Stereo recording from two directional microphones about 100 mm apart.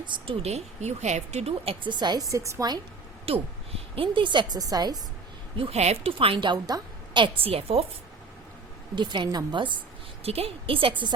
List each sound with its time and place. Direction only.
0.0 s a woman's voice: 50° right (ahead or behind)
0.4 s speech: 90° right
1.9 s a woman's voice: 45° right (ahead or behind)
2.2 s a woman's voice: 30° right (ahead or behind)
3.2 s a woman's voice: 75° right (ahead or behind); by 4.6 s 50° right (ahead or behind)
4.6 s a woman's voice: 40° right (ahead or behind)
5.5 s a woman's voice: 80° right; by 7.4 s 50° right (ahead or behind)
7.4 s a woman's voice: 80° right
9.0 s a woman's voice: 50° right (ahead or behind)
10.2 s a woman's voice: 80° right; by 11.1 s 60° right (ahead or behind)